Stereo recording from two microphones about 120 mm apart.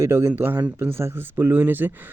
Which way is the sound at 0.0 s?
20° right (ahead or behind).